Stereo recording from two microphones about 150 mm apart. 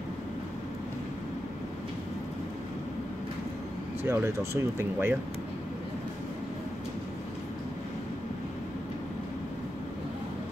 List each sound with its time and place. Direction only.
4.0 s speech: 15° right (ahead or behind)